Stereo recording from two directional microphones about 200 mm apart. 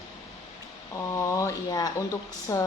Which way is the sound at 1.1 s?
15° left (ahead or behind).